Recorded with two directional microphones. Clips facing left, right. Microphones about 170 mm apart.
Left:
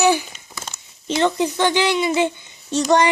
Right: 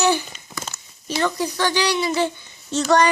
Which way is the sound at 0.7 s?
20° left (ahead or behind).